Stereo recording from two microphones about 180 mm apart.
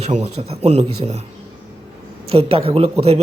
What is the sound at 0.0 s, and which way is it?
A woman's voice, 35° right (ahead or behind).